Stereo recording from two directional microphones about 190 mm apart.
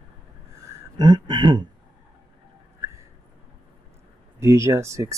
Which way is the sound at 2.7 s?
15° right (ahead or behind).